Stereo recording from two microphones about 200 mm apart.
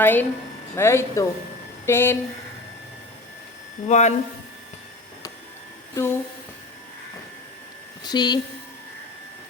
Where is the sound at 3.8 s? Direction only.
35° left (ahead or behind).